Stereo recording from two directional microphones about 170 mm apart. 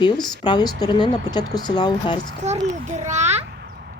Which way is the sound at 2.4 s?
45° right (ahead or behind).